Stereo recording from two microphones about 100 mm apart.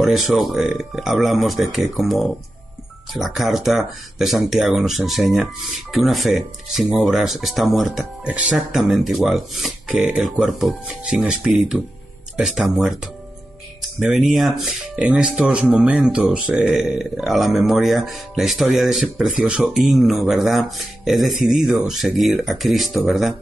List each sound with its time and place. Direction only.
0.0 s speech: centre (ahead or behind)
9.9 s speech: 15° right (ahead or behind)
10.2 s speech: centre (ahead or behind)